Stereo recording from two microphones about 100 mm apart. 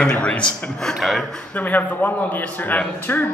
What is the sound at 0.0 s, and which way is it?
Speech, 10° left (ahead or behind).